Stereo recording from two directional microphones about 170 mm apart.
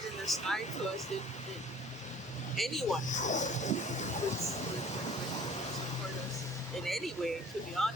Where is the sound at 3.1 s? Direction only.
45° left (ahead or behind).